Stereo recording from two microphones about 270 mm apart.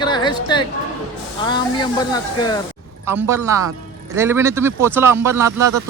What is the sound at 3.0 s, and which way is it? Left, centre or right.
Speech, centre.